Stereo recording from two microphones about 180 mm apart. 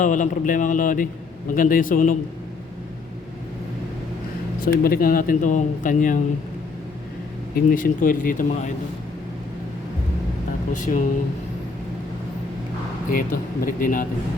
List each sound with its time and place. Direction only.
0.0 s speech: 45° left (ahead or behind)
4.6 s speech: 55° left (ahead or behind)
7.7 s speech: 50° left (ahead or behind)
10.7 s speech: 45° left (ahead or behind)
13.1 s speech: 55° left (ahead or behind)